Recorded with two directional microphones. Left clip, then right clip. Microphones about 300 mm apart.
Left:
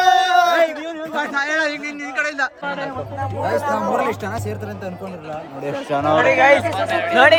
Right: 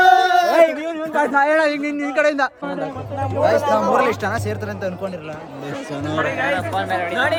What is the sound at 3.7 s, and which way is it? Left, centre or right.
Speech, centre.